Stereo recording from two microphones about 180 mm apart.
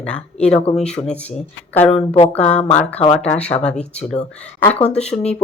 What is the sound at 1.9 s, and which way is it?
Speech, 35° left (ahead or behind).